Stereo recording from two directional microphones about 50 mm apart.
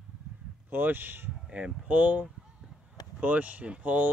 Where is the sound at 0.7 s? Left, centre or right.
Right.